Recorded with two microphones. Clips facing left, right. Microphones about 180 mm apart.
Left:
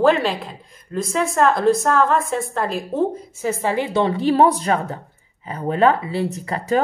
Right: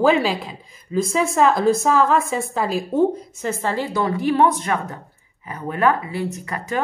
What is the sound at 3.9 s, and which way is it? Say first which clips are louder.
Speech: left 2 dB; 25° left (ahead or behind).